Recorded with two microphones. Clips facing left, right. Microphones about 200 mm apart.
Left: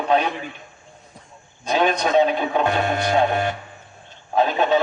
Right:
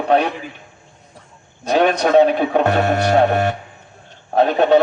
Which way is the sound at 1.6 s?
65° right (ahead or behind).